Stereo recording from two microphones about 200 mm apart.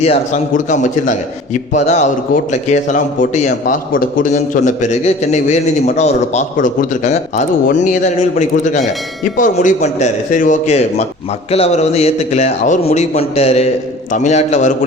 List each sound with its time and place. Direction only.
0.0 s a man's voice: 35° left (ahead or behind)